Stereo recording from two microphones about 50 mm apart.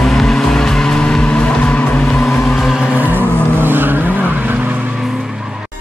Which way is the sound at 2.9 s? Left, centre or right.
Right.